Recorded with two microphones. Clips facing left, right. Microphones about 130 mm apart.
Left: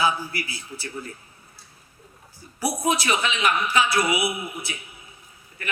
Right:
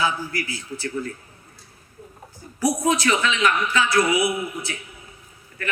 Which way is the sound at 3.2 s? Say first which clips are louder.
Right 3 dB; 25° left (ahead or behind).